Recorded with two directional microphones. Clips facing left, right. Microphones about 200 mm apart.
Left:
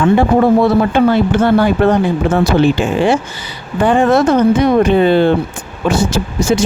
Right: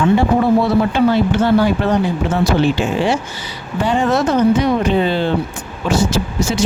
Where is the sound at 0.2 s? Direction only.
55° left (ahead or behind).